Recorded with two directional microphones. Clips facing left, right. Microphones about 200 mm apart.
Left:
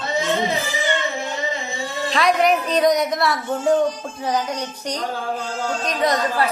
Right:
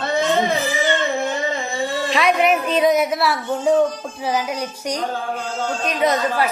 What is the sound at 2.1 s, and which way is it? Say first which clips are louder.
A woman's voice: left 1 dB; 5° right (ahead or behind).